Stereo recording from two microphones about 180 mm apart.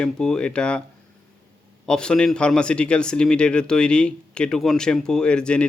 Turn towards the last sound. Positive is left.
turn(degrees=5)  # may be behind; listen again after turning